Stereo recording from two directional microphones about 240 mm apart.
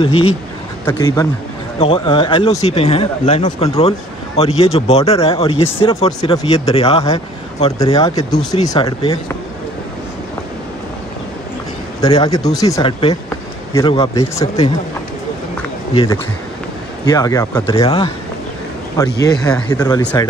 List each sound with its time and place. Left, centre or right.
0.0 s speech: left
12.0 s speech: centre
15.9 s speech: left